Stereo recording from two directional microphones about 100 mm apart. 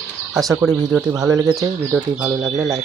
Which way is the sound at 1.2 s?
35° right (ahead or behind).